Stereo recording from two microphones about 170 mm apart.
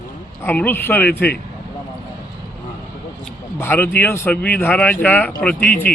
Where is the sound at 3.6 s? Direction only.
10° left (ahead or behind).